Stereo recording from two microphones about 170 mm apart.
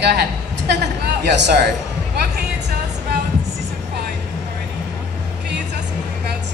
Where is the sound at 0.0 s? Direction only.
75° right (ahead or behind).